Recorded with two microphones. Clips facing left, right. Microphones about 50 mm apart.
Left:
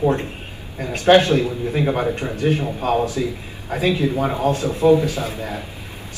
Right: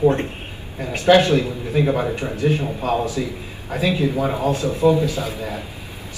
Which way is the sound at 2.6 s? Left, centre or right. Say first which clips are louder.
Left 1 dB; left.